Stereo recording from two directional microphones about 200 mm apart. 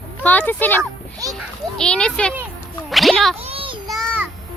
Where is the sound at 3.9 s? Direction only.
5° right (ahead or behind).